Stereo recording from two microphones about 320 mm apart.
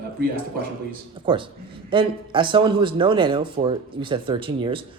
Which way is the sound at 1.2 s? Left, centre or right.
Centre.